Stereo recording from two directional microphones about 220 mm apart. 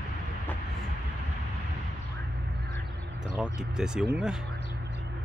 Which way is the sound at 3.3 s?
5° right (ahead or behind).